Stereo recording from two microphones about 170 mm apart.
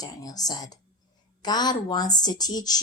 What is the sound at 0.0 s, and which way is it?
Speech, 20° left (ahead or behind).